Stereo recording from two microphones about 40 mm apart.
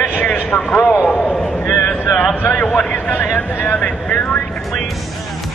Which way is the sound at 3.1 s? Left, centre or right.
Left.